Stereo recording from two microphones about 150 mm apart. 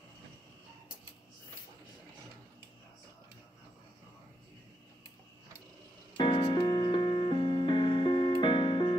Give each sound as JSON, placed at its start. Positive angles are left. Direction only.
{"t": 6.1, "sound": "music", "side_deg": 35}